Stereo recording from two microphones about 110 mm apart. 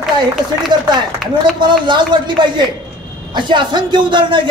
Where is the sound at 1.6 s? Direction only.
45° right (ahead or behind).